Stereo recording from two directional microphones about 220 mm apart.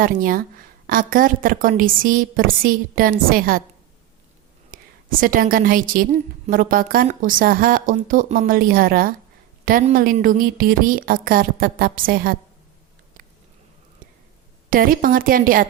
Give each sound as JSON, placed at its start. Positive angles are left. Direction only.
{"t": 0.0, "sound": "a woman's voice", "side_deg": -40}
{"t": 4.7, "sound": "a woman's voice", "side_deg": -40}
{"t": 14.7, "sound": "a woman's voice", "side_deg": -40}